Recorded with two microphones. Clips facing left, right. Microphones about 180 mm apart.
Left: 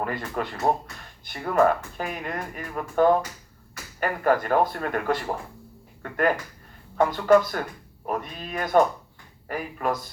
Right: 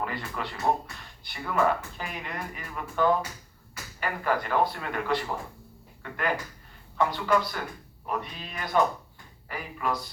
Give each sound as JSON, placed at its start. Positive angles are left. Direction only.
{"t": 0.0, "sound": "speech", "side_deg": 45}